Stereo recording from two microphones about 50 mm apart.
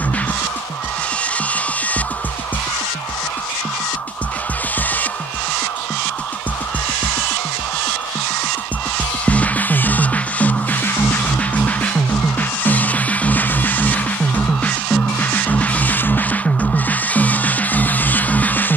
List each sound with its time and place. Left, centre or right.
9.2 s music: left